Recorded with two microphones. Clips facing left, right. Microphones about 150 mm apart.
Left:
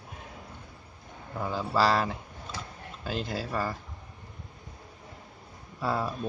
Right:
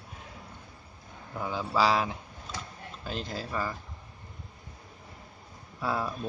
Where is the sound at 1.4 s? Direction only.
Centre (ahead or behind).